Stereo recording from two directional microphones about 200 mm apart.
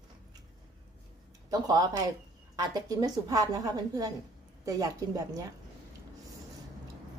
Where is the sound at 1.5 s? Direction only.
20° right (ahead or behind).